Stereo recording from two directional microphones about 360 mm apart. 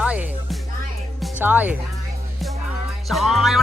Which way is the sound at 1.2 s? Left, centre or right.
Centre.